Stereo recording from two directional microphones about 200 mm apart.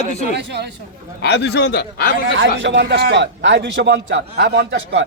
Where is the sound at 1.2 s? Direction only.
55° left (ahead or behind).